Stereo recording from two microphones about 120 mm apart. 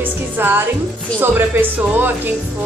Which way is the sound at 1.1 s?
15° right (ahead or behind).